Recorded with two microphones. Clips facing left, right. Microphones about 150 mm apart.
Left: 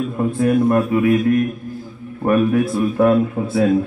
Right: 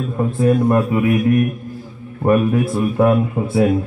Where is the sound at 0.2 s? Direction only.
25° right (ahead or behind).